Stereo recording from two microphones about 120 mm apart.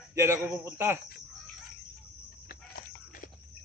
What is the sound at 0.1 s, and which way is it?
Speech, 20° right (ahead or behind).